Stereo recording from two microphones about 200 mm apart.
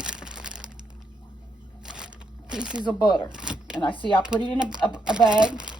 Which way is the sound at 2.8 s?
20° left (ahead or behind).